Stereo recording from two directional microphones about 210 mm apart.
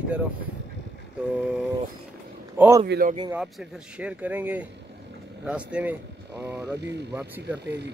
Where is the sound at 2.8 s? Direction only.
50° right (ahead or behind).